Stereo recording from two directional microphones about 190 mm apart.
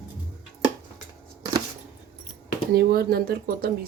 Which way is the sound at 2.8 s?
55° right (ahead or behind).